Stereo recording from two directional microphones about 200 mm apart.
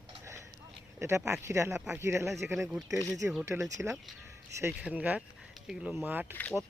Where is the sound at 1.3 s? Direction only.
15° right (ahead or behind).